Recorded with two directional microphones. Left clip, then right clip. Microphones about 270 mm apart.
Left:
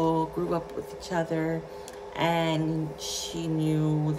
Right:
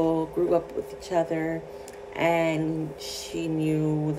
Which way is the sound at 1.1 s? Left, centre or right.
Left.